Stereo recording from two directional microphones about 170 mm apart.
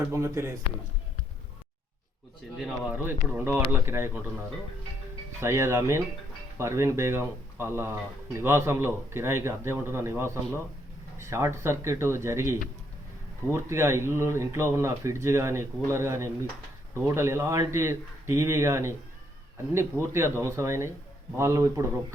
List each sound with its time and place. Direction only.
0.1 s speech: 15° right (ahead or behind)
2.6 s speech: 10° right (ahead or behind)
5.4 s speech: 15° right (ahead or behind)